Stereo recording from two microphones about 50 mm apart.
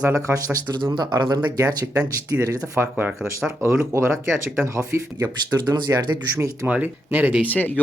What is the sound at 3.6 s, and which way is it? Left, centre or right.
Speech, right.